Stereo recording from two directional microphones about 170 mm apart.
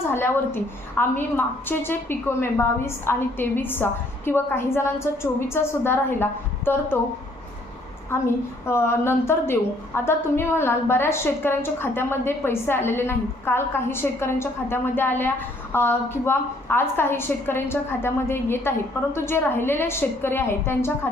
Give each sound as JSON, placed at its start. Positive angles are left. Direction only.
{"t": 0.1, "sound": "a woman's voice", "side_deg": 15}
{"t": 8.1, "sound": "a woman's voice", "side_deg": 15}